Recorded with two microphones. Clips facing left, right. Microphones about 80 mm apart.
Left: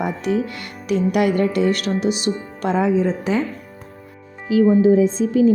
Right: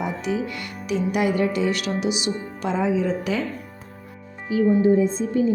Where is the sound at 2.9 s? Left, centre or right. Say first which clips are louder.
Left 4 dB; left.